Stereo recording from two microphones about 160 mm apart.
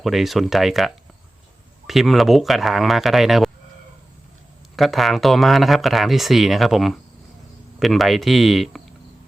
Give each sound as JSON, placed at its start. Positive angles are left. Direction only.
{"t": 0.0, "sound": "speech", "side_deg": 0}
{"t": 4.8, "sound": "speech", "side_deg": 0}